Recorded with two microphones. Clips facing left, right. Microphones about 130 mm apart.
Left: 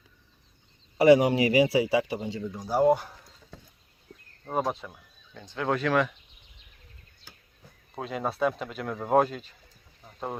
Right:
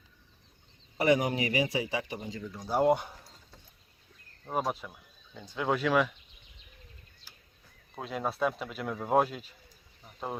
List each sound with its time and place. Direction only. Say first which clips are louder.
0.9 s speech: left 8 dB; 30° left (ahead or behind)
2.6 s speech: left 2 dB; 10° left (ahead or behind)
2.8 s speech: left 3 dB; centre (ahead or behind)
4.5 s speech: left 3 dB; 5° right (ahead or behind)
7.9 s speech: left 3 dB; centre (ahead or behind)